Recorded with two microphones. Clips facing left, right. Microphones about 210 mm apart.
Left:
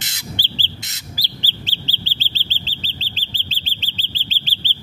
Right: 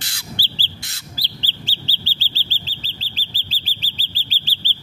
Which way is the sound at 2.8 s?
30° left (ahead or behind).